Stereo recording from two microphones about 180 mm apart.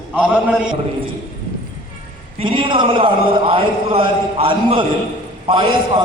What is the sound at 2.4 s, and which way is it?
A man's voice, 30° right (ahead or behind).